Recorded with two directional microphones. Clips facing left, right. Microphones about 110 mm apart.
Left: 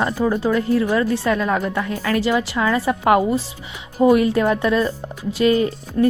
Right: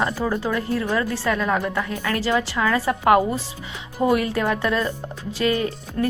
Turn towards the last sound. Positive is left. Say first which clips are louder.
# left 6 dB
turn(degrees=15)  # may be behind; listen again after turning